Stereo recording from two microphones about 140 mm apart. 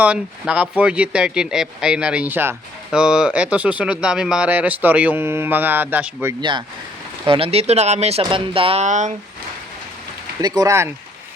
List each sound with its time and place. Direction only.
0.0 s speech: 10° right (ahead or behind)
6.4 s speech: 35° right (ahead or behind); by 8.2 s 50° right (ahead or behind)
8.2 s speech: 40° right (ahead or behind)
8.8 s speech: 60° right (ahead or behind)
10.4 s speech: 30° right (ahead or behind)